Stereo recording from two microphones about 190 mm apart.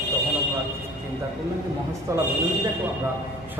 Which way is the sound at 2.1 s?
15° right (ahead or behind).